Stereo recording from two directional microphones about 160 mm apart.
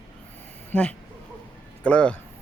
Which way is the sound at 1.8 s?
10° left (ahead or behind).